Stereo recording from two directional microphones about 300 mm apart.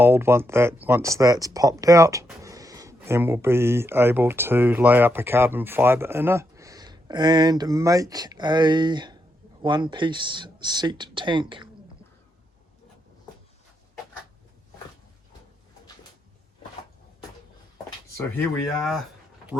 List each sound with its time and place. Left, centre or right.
0.0 s speech: centre
18.5 s speech: centre